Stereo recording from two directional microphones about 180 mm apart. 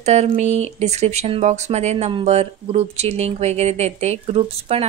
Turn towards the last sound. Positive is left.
turn(degrees=-35)  # may be behind; listen again after turning